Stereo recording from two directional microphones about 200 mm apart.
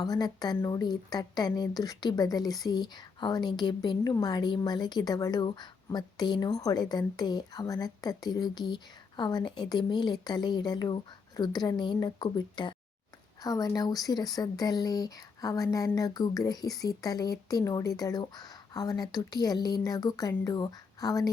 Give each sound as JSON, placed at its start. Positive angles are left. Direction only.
{"t": 0.0, "sound": "speech", "side_deg": 20}